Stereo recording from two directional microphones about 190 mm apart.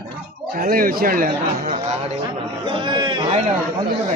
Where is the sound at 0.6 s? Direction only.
50° right (ahead or behind).